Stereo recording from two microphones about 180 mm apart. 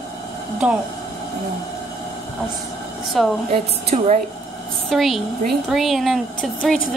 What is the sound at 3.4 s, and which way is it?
Speech, 40° right (ahead or behind).